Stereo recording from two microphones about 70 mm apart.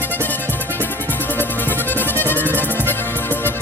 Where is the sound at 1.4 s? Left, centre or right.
Left.